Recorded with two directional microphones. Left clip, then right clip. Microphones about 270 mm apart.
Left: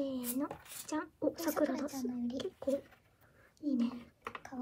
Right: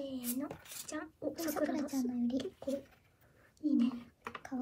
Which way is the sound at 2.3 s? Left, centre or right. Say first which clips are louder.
Left 2 dB; centre.